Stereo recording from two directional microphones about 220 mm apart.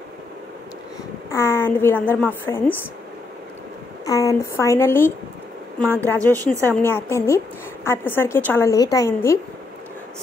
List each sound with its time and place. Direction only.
1.3 s a woman's voice: 10° left (ahead or behind)
4.0 s a woman's voice: 15° left (ahead or behind)
6.1 s a woman's voice: 15° right (ahead or behind)
6.6 s a woman's voice: 10° left (ahead or behind)